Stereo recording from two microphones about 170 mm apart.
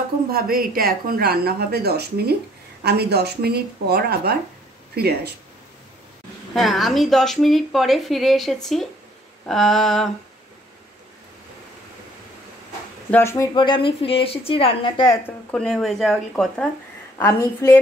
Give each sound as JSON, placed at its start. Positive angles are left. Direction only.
{"t": 0.3, "sound": "a woman's voice", "side_deg": -60}
{"t": 6.5, "sound": "a woman's voice", "side_deg": 0}
{"t": 13.1, "sound": "a woman's voice", "side_deg": 15}
{"t": 13.6, "sound": "a woman's voice", "side_deg": 30}
{"t": 15.2, "sound": "a woman's voice", "side_deg": 5}
{"t": 17.2, "sound": "a woman's voice", "side_deg": 15}